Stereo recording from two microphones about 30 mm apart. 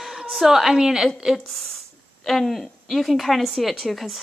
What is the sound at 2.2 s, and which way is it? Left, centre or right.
A woman's voice, centre.